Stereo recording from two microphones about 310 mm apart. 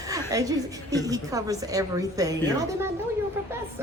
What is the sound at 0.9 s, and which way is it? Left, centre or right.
A woman's voice, centre.